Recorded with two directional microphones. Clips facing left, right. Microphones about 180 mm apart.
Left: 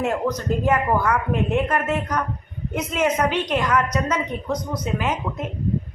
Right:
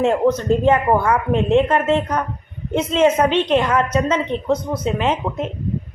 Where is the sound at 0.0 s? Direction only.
25° right (ahead or behind).